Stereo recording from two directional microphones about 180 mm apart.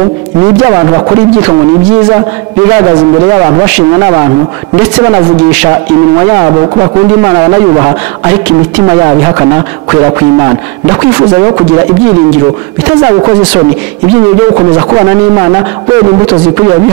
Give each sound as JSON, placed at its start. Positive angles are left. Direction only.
{"t": 0.6, "sound": "a man's voice", "side_deg": -20}
{"t": 2.7, "sound": "a man's voice", "side_deg": -15}
{"t": 6.2, "sound": "a man's voice", "side_deg": -25}
{"t": 11.3, "sound": "a man's voice", "side_deg": -25}
{"t": 13.0, "sound": "a man's voice", "side_deg": -20}